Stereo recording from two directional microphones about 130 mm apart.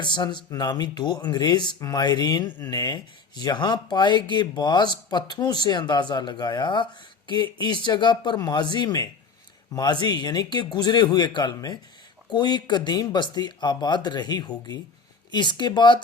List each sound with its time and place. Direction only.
0.0 s speech: 35° left (ahead or behind)